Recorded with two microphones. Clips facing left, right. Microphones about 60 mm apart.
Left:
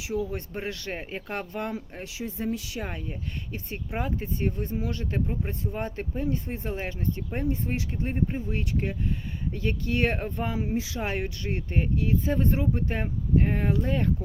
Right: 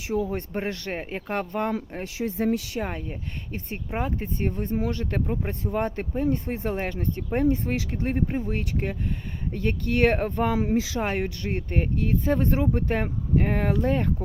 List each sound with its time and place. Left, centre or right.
0.0 s speech: right
0.9 s speech: right
2.0 s speech: right
3.5 s speech: right
5.2 s speech: right
5.5 s speech: right
6.4 s speech: right
10.8 s speech: right
11.0 s speech: right